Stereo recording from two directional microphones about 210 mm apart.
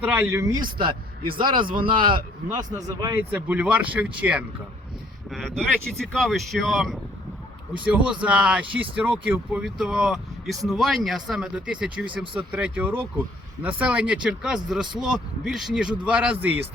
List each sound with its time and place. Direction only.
0.0 s a man's voice: 10° right (ahead or behind)
3.3 s speech: 5° right (ahead or behind)